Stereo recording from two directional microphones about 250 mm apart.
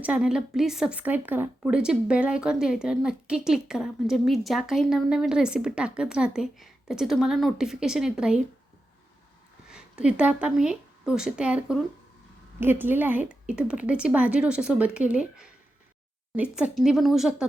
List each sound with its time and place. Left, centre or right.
0.0 s a woman's voice: centre
9.6 s a woman's voice: centre